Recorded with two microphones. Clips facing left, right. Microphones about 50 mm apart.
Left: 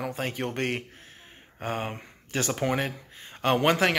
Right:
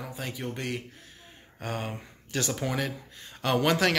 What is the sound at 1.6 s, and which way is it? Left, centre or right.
A man's voice, left.